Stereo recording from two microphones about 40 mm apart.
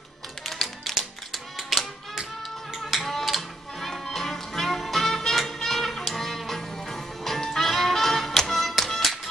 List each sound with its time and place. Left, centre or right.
0.5 s tap: centre
0.9 s music: centre